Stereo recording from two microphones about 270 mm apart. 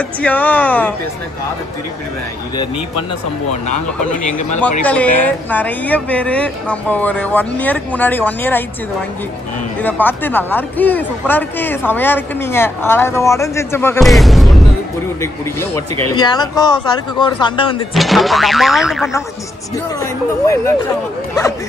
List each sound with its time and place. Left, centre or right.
0.2 s a woman's voice: centre
4.3 s speech: left
4.8 s a woman's voice: centre
9.8 s speech: centre
16.1 s speech: centre
17.9 s a woman's voice: centre
20.0 s speech: centre